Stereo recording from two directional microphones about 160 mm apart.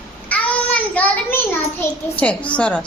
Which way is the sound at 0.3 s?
10° left (ahead or behind).